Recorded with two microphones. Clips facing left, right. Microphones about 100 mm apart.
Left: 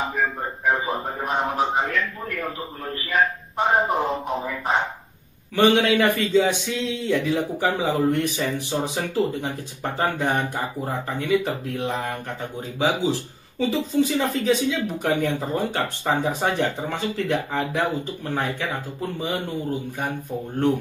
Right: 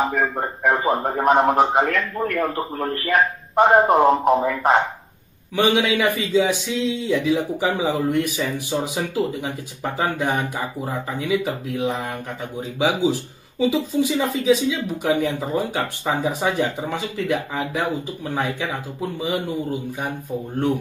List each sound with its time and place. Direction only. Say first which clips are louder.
0.1 s a man's voice: right 3 dB; 75° right (ahead or behind); by 4.7 s 90° right
5.6 s speech: left 1 dB; 15° right (ahead or behind)
7.6 s speech: left 2 dB; 15° right (ahead or behind)
12.7 s speech: right 2 dB; 15° right (ahead or behind)